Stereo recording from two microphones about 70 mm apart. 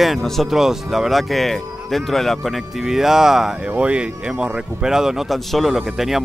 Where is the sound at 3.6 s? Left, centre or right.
Centre.